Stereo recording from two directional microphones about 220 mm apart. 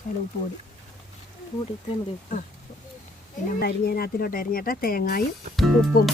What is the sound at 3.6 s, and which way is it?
Speech, 45° left (ahead or behind).